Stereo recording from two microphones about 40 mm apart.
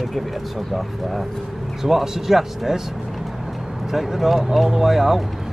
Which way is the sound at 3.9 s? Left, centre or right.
Centre.